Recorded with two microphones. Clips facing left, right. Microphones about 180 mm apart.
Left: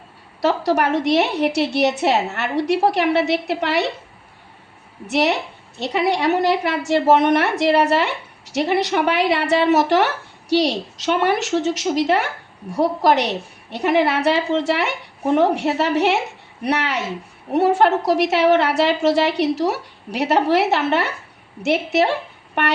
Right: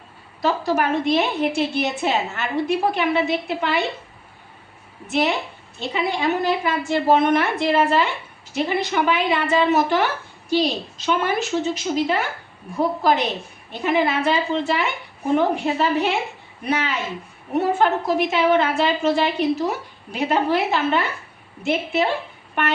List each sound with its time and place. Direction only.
0.4 s a woman's voice: 75° left (ahead or behind)
5.0 s a woman's voice: 70° left (ahead or behind)